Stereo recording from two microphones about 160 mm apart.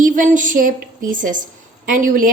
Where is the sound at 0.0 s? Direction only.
55° right (ahead or behind).